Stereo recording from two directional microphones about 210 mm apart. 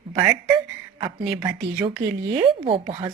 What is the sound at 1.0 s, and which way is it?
A woman's voice, 25° right (ahead or behind).